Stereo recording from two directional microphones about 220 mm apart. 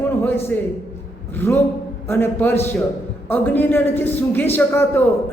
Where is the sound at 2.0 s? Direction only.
10° left (ahead or behind).